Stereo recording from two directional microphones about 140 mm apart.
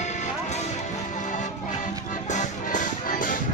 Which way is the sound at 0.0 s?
55° left (ahead or behind).